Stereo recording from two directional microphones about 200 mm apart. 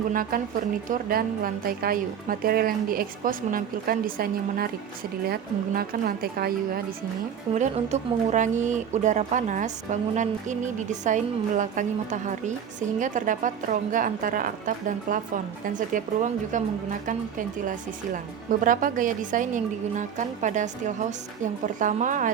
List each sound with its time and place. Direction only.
0.1 s a woman's voice: 45° right (ahead or behind)
7.5 s speech: 35° right (ahead or behind)
17.1 s speech: 40° right (ahead or behind)